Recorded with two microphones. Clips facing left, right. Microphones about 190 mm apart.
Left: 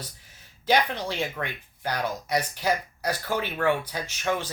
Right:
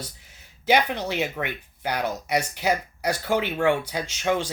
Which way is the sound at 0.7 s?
10° right (ahead or behind).